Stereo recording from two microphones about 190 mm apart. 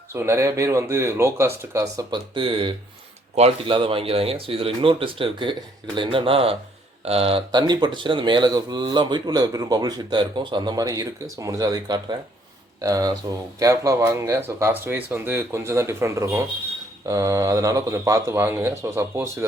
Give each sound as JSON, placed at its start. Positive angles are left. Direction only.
{"t": 0.1, "sound": "speech", "side_deg": -15}